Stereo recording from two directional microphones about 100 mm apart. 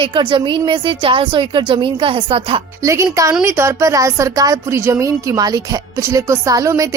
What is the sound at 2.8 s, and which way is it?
Speech, 30° right (ahead or behind).